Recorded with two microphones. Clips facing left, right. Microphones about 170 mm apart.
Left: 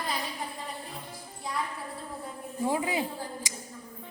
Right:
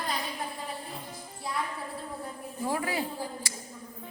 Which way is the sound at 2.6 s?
20° left (ahead or behind).